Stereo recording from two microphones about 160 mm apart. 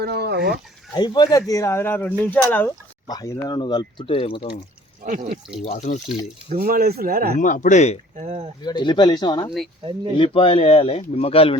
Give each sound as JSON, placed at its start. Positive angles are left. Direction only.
{"t": 0.0, "sound": "speech", "side_deg": -90}
{"t": 0.9, "sound": "speech", "side_deg": 25}
{"t": 5.0, "sound": "speech", "side_deg": -55}
{"t": 5.6, "sound": "speech", "side_deg": 45}
{"t": 6.5, "sound": "speech", "side_deg": -65}
{"t": 7.3, "sound": "speech", "side_deg": 55}
{"t": 8.1, "sound": "speech", "side_deg": -45}
{"t": 8.6, "sound": "speech", "side_deg": 30}